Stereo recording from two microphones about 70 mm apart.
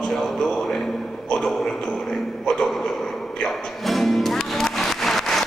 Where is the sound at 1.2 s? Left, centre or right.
Centre.